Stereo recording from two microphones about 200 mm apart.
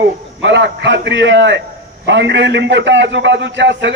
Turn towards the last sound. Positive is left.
turn(degrees=-60)  # may be behind; listen again after turning